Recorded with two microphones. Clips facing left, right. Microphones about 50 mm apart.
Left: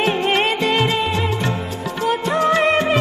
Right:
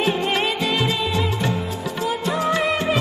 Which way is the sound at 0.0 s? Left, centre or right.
Left.